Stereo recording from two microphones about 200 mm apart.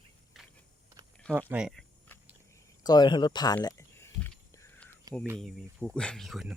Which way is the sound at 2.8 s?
20° left (ahead or behind).